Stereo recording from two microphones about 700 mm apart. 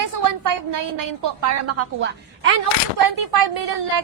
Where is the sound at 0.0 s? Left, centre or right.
Right.